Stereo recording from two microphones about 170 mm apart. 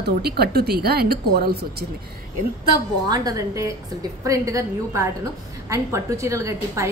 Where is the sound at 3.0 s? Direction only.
20° right (ahead or behind).